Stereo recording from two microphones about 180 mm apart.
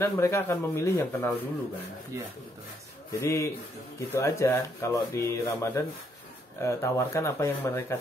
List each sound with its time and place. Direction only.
0.0 s speech: 15° left (ahead or behind)
3.1 s speech: 15° left (ahead or behind)